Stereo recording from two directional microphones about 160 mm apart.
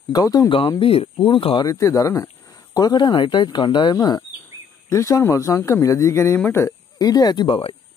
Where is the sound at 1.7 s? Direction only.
20° left (ahead or behind).